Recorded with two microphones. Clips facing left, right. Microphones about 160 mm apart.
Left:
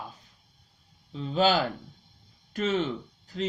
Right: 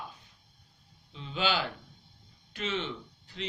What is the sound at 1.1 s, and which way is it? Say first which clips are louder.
Speech: left 7 dB; 40° left (ahead or behind).